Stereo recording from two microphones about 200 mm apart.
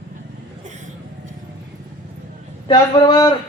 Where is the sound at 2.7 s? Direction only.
20° left (ahead or behind).